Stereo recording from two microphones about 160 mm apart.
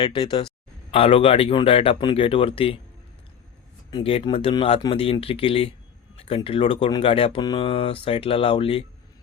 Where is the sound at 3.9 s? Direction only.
30° left (ahead or behind).